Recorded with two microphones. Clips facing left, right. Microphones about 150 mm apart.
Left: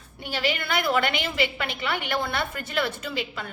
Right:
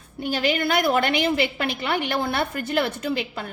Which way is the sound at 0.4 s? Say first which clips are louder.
Right 4 dB; 40° right (ahead or behind).